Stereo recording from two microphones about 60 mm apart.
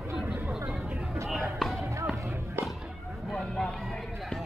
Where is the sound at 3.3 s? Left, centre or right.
Centre.